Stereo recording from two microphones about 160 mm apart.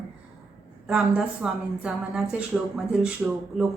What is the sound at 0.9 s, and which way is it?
A woman's voice, 5° right (ahead or behind).